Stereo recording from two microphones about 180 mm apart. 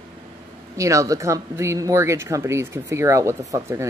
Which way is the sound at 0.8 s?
15° right (ahead or behind).